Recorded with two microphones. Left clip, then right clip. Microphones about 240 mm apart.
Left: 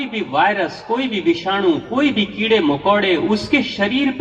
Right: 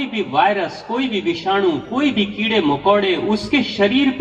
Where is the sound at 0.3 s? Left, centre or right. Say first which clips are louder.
Even; left.